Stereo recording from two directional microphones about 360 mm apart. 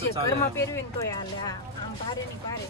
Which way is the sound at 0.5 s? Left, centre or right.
Centre.